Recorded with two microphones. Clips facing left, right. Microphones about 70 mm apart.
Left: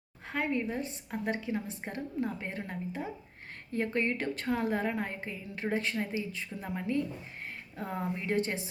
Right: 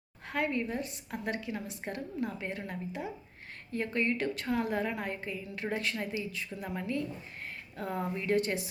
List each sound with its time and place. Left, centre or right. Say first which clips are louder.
0.3 s a woman's voice: even; left